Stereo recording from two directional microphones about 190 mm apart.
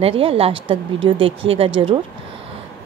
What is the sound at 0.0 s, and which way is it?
Speech, 30° right (ahead or behind).